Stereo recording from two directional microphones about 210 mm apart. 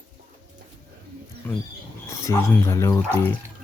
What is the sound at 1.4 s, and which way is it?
Wild animals, 10° left (ahead or behind).